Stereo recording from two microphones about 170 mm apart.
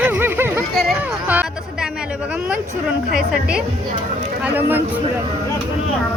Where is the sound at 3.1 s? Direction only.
5° right (ahead or behind).